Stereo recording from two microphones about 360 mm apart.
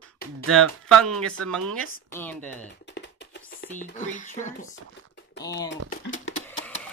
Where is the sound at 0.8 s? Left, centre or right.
Centre.